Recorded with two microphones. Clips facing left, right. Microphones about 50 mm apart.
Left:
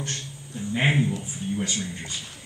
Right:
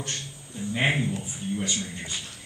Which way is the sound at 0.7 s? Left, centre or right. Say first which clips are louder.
Left 2 dB; centre.